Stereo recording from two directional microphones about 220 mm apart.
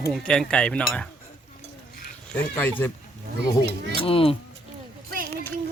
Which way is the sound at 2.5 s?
10° left (ahead or behind).